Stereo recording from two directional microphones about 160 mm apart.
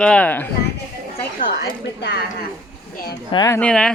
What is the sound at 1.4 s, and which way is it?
Speech, 80° left.